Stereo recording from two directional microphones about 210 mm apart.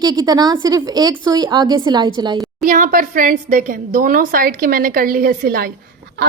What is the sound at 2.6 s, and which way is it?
A woman's voice, 40° right (ahead or behind).